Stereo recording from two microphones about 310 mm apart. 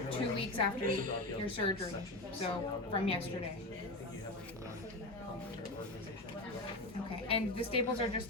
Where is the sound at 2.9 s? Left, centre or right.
Centre.